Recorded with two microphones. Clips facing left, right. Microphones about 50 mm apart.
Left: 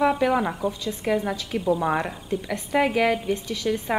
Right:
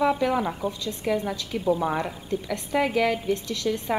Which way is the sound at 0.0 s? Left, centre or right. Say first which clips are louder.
Left 2 dB; centre.